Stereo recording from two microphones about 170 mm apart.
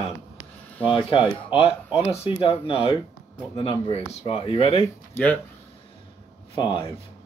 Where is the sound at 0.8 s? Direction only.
30° left (ahead or behind).